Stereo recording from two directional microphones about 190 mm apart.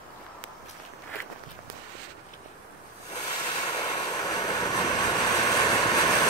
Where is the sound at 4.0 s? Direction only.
20° left (ahead or behind).